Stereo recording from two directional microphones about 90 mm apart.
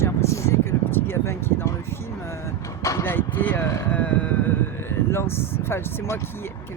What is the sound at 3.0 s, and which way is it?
Speech, 20° left (ahead or behind).